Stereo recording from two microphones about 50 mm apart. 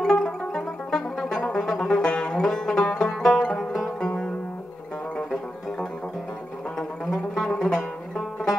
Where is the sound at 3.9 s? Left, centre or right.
Centre.